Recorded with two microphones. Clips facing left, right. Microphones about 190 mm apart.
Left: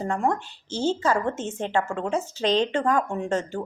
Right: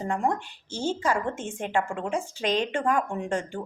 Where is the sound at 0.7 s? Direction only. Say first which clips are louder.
Left 3 dB; 10° right (ahead or behind).